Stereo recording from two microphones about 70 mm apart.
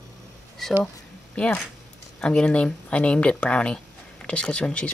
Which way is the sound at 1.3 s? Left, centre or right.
Centre.